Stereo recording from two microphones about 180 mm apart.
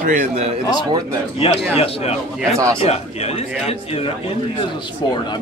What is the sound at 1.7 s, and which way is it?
A man's voice, 35° left (ahead or behind).